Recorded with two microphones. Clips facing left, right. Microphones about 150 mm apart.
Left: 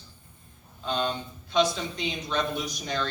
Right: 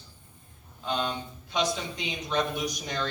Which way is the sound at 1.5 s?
15° right (ahead or behind).